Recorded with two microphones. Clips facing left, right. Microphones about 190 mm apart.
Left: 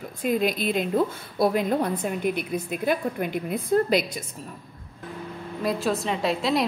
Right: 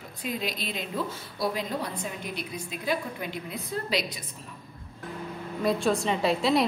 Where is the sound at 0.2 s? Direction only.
50° left (ahead or behind).